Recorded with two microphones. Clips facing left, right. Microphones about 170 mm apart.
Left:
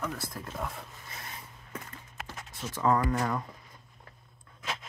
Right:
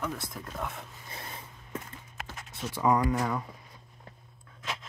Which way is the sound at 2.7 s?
15° right (ahead or behind).